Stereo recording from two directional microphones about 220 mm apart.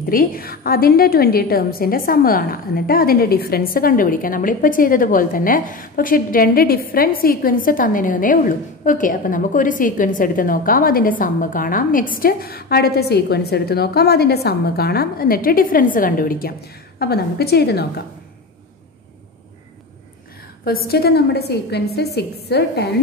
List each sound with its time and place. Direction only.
0.1 s a woman's voice: 40° left (ahead or behind)
20.6 s a woman's voice: 45° left (ahead or behind)